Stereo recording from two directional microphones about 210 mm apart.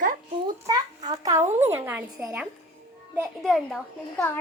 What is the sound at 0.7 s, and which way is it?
A child's voice, 20° right (ahead or behind).